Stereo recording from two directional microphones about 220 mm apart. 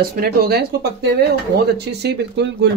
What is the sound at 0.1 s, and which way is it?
Speech, 45° right (ahead or behind).